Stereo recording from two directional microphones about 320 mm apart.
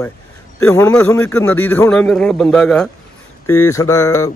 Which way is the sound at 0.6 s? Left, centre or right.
Centre.